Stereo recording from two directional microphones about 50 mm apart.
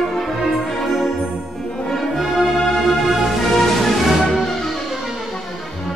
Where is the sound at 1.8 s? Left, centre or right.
Centre.